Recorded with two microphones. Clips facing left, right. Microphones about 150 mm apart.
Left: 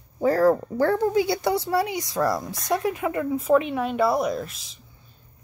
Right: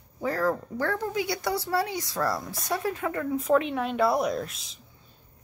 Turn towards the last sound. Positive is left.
turn(degrees=0)  # may be behind; listen again after turning